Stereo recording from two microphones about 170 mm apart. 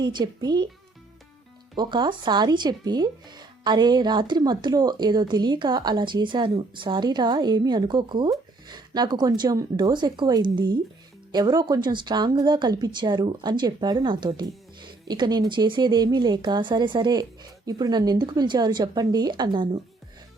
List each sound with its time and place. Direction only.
0.0 s speech: 25° right (ahead or behind)
1.7 s speech: 25° right (ahead or behind)